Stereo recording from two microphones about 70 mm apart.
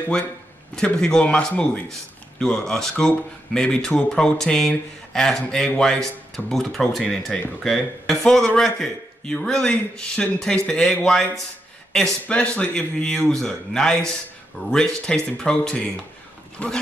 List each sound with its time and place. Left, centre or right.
0.7 s speech: centre